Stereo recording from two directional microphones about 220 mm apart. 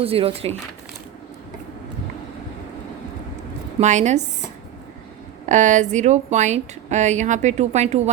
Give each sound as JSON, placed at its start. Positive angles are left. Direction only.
{"t": 0.0, "sound": "speech", "side_deg": -25}
{"t": 3.8, "sound": "a woman's voice", "side_deg": -30}
{"t": 5.5, "sound": "a woman's voice", "side_deg": -35}